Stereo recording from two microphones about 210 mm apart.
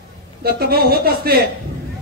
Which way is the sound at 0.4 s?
45° right (ahead or behind).